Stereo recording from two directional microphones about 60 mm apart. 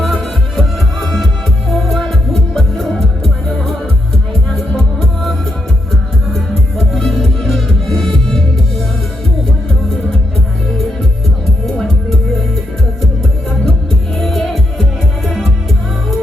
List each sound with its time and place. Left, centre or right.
0.0 s music: centre
4.8 s music: centre
14.2 s music: centre